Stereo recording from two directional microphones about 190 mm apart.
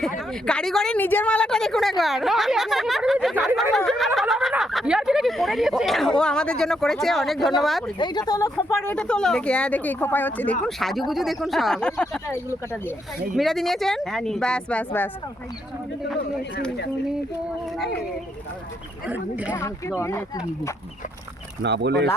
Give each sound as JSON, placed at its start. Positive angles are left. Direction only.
{"t": 0.2, "sound": "speech", "side_deg": 5}
{"t": 7.9, "sound": "speech", "side_deg": 25}
{"t": 19.0, "sound": "speech", "side_deg": -5}
{"t": 19.5, "sound": "speech", "side_deg": 15}
{"t": 21.6, "sound": "speech", "side_deg": -65}